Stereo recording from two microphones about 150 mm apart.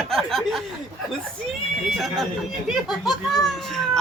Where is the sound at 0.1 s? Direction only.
Centre (ahead or behind).